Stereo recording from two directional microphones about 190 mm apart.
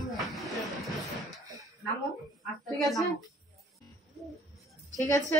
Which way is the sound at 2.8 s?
Centre (ahead or behind).